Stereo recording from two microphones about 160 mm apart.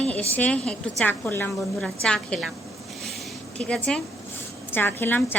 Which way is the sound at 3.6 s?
5° left (ahead or behind).